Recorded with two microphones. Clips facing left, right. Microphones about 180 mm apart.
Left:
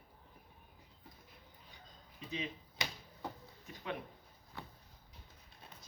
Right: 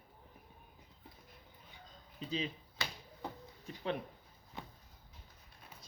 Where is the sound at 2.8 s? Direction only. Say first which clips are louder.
Even; 20° left (ahead or behind).